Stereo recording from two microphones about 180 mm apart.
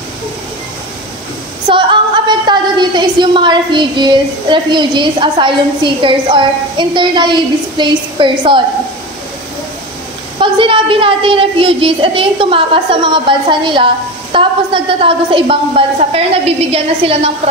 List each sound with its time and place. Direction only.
1.7 s a woman's voice: 25° right (ahead or behind)
10.4 s a woman's voice: 30° right (ahead or behind)